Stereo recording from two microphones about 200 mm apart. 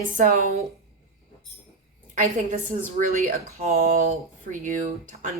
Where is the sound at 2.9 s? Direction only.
35° right (ahead or behind).